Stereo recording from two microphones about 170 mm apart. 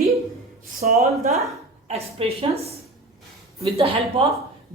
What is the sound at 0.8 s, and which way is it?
Speech, 50° right (ahead or behind).